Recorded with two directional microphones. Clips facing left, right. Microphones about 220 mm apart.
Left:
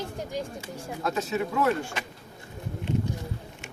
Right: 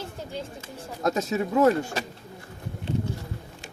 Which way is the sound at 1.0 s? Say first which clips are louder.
Right 3 dB; 40° right (ahead or behind).